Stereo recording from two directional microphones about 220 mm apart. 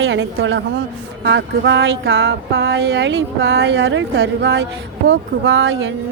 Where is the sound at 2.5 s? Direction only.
50° right (ahead or behind).